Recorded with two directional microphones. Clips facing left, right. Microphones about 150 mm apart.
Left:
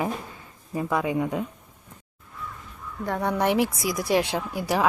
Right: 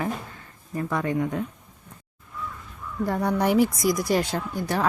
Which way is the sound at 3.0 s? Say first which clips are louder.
Right 1 dB; centre (ahead or behind).